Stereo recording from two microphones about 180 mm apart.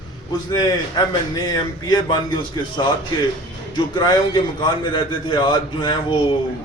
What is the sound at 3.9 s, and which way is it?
A man's voice, 25° left (ahead or behind).